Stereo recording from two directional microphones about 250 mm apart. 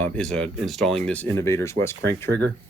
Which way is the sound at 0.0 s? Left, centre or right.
Centre.